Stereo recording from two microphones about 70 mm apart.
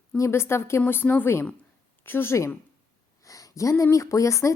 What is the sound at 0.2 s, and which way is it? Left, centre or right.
A woman's voice, left.